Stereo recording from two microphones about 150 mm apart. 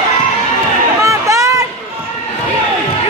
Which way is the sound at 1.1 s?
20° right (ahead or behind).